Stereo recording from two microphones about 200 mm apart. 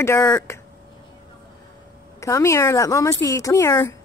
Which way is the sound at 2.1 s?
15° left (ahead or behind).